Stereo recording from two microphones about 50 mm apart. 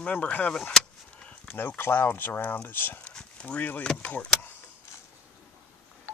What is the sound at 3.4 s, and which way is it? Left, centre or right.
Speech, left.